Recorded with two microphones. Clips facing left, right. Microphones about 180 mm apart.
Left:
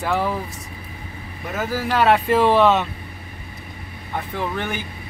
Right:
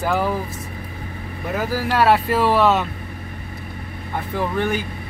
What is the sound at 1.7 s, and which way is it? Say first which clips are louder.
Speech: even; 5° right (ahead or behind).